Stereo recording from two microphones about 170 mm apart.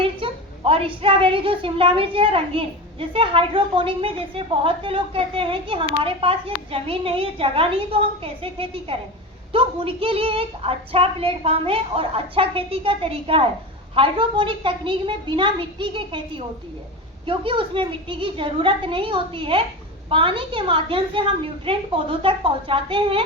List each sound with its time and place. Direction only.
0.0 s a woman's voice: 30° right (ahead or behind)